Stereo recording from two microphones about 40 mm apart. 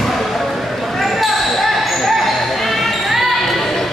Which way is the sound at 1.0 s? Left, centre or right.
Centre.